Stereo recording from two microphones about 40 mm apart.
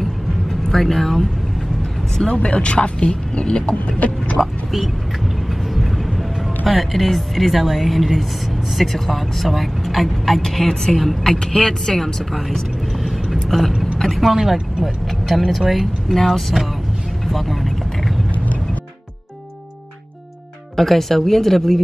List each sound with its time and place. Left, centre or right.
0.0 s vehicle: centre
2.2 s speech: left
4.0 s a sound: left
4.4 s speech: centre
6.6 s speech: centre
11.3 s speech: centre
17.3 s vehicle: centre
20.7 s speech: centre